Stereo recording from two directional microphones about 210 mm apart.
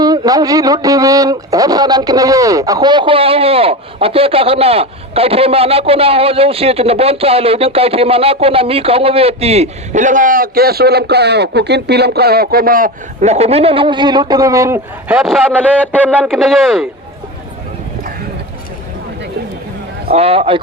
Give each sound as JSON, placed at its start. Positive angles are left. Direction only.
{"t": 0.0, "sound": "speech", "side_deg": -15}
{"t": 20.1, "sound": "speech", "side_deg": -30}